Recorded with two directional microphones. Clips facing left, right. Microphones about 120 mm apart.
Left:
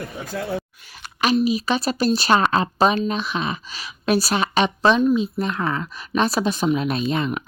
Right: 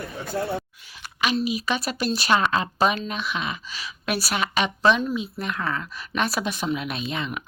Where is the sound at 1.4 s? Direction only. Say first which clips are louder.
Left 5 dB; 30° left (ahead or behind).